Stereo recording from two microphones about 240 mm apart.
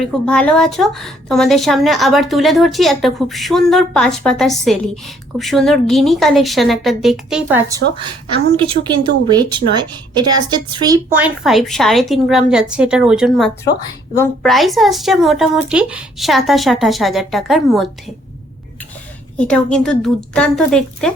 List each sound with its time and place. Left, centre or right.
0.0 s a woman's voice: centre
7.8 s a woman's voice: right
8.5 s a woman's voice: right; by 18.1 s centre
19.4 s a woman's voice: centre